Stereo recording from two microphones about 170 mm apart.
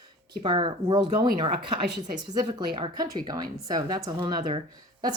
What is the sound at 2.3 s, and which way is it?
Speech, 25° right (ahead or behind).